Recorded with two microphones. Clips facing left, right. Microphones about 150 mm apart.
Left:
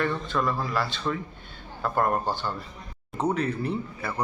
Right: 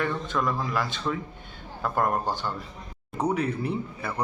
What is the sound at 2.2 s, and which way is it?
Speech, 15° right (ahead or behind).